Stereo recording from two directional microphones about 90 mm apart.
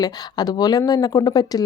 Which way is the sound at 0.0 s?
50° left (ahead or behind).